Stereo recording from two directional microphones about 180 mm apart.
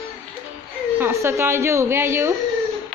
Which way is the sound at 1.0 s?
15° right (ahead or behind).